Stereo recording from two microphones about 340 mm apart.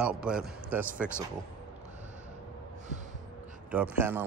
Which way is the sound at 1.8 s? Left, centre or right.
Right.